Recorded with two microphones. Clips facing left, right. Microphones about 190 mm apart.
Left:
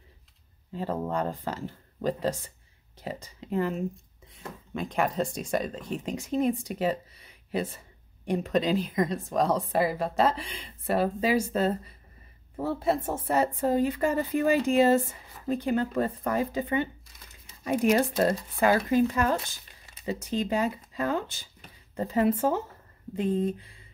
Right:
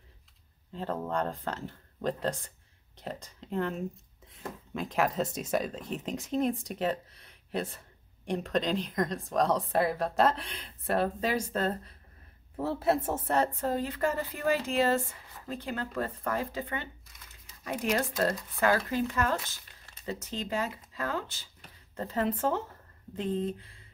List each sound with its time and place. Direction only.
0.7 s a woman's voice: 5° left (ahead or behind)
13.3 s speech: 10° left (ahead or behind)